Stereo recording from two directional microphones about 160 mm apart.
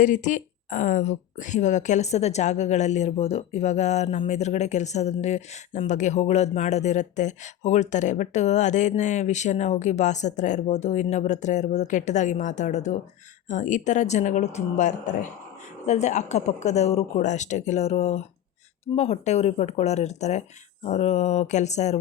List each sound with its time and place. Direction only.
0.0 s speech: 50° left (ahead or behind)